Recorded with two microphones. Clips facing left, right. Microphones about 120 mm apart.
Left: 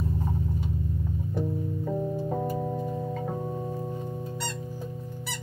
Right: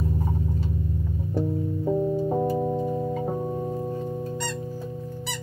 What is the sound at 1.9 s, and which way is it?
Music, 25° right (ahead or behind).